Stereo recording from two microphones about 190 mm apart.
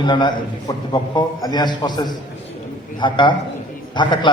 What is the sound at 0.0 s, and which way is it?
A man's voice, 25° left (ahead or behind).